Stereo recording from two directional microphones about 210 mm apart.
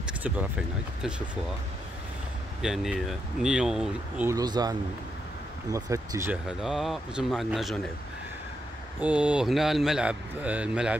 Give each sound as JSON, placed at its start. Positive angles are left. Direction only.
{"t": 0.0, "sound": "speech", "side_deg": -5}
{"t": 2.6, "sound": "speech", "side_deg": 0}
{"t": 4.3, "sound": "speech", "side_deg": -20}
{"t": 6.6, "sound": "speech", "side_deg": 0}
{"t": 9.0, "sound": "speech", "side_deg": -5}